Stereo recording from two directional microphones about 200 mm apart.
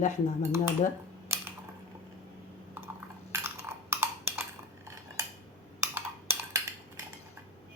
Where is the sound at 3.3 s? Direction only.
15° right (ahead or behind).